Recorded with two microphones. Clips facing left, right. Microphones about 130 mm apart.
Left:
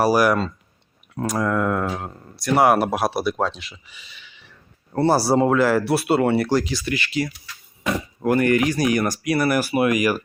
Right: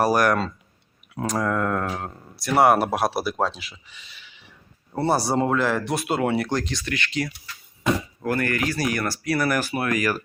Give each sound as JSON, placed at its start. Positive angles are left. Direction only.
{"t": 0.0, "sound": "speech", "side_deg": 5}
{"t": 8.2, "sound": "speech", "side_deg": 20}